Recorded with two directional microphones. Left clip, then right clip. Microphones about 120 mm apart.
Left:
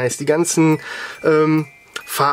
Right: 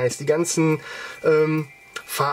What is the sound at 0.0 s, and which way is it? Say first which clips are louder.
Speech: left 3 dB; 40° left (ahead or behind).